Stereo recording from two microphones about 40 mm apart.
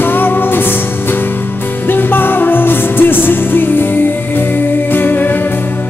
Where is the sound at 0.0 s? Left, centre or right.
Left.